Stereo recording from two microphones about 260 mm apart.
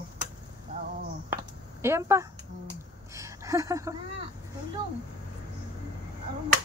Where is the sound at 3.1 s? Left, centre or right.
Centre.